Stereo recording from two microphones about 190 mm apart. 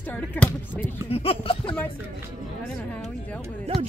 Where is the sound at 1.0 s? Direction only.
30° left (ahead or behind).